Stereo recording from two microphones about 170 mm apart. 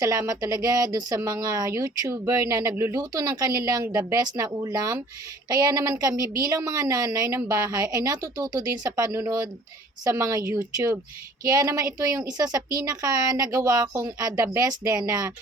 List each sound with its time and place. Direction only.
0.0 s speech: 20° right (ahead or behind)